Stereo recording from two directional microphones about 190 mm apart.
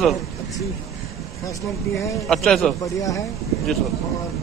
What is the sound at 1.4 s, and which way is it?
Speech, 15° left (ahead or behind).